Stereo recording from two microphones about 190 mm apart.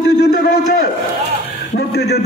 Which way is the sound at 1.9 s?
60° left (ahead or behind).